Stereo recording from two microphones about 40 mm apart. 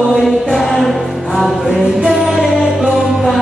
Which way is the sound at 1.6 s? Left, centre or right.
Centre.